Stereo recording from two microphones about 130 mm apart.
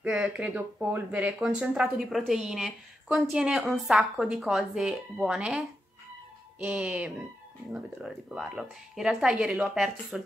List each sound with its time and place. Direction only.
0.0 s speech: 5° right (ahead or behind)